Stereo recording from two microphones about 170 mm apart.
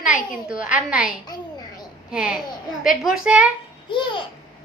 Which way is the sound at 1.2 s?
20° left (ahead or behind).